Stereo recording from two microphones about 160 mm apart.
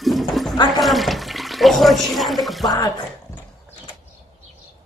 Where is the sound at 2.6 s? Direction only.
25° left (ahead or behind).